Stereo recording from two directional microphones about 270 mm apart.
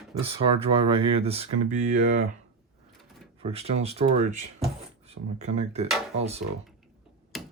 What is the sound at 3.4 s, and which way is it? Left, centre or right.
Speech, right.